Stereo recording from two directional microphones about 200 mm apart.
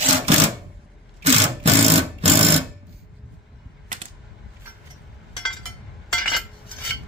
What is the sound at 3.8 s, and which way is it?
Typewriter, 35° right (ahead or behind).